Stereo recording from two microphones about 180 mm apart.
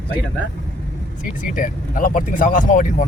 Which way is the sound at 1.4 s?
45° left (ahead or behind).